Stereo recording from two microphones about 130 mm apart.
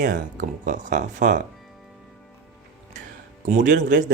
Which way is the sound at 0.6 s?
80° right.